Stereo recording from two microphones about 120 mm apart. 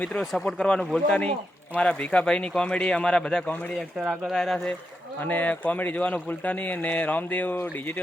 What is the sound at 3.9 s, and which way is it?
Speech, 5° right (ahead or behind).